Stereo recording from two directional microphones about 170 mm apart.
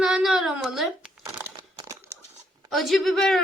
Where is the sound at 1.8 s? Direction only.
15° right (ahead or behind).